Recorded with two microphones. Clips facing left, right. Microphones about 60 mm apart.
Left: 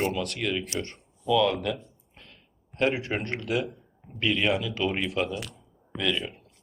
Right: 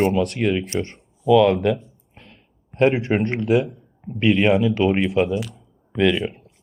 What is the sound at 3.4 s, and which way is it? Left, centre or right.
Speech, centre.